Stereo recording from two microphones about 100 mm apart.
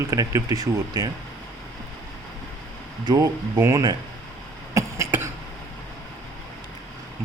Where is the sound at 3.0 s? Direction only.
35° right (ahead or behind).